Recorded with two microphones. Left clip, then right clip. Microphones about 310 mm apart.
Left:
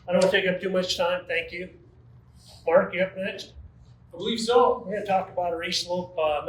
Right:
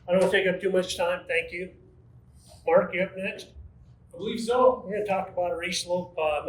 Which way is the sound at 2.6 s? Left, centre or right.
Centre.